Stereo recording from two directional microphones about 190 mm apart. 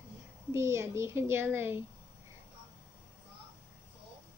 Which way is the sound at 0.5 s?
15° right (ahead or behind).